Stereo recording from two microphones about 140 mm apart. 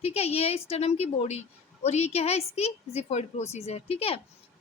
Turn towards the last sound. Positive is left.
turn(degrees=45)  # may be behind; listen again after turning